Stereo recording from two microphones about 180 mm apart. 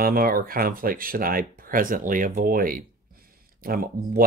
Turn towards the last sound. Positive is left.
turn(degrees=-55)  # may be behind; listen again after turning